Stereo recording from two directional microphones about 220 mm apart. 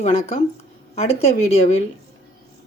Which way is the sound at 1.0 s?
25° left (ahead or behind).